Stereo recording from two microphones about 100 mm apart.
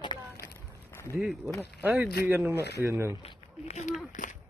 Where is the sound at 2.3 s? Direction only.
25° right (ahead or behind).